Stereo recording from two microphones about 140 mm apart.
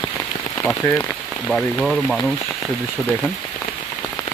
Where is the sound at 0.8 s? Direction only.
20° left (ahead or behind).